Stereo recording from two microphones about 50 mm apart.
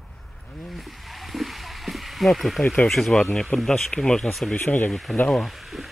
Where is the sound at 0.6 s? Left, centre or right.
Centre.